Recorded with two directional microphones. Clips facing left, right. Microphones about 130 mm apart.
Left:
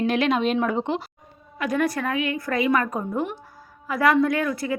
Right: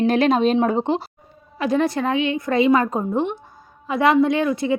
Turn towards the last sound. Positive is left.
turn(degrees=-20)  # may be behind; listen again after turning